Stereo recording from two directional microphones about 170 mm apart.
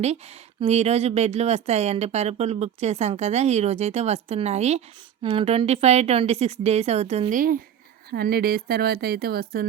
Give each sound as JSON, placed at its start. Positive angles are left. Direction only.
{"t": 0.0, "sound": "speech", "side_deg": -40}
{"t": 7.3, "sound": "speech", "side_deg": -55}
{"t": 8.1, "sound": "speech", "side_deg": -65}